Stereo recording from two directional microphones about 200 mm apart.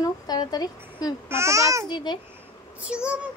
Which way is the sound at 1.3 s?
15° right (ahead or behind).